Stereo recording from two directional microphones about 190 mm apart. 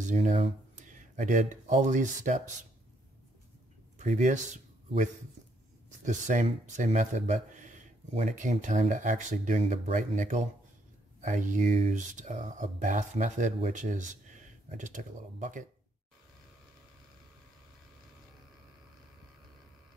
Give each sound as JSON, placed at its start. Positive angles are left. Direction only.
{"t": 0.1, "sound": "speech", "side_deg": -40}
{"t": 4.0, "sound": "speech", "side_deg": -40}
{"t": 6.0, "sound": "speech", "side_deg": -40}